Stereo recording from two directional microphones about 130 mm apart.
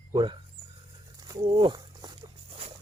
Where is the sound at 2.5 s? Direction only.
45° right (ahead or behind).